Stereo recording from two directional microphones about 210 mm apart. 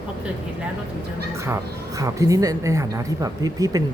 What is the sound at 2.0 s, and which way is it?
A woman's voice, 15° right (ahead or behind).